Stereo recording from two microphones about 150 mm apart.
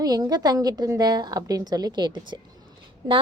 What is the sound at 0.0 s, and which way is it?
A woman's voice, 25° right (ahead or behind).